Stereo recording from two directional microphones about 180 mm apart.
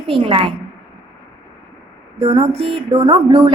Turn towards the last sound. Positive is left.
turn(degrees=-25)  # may be behind; listen again after turning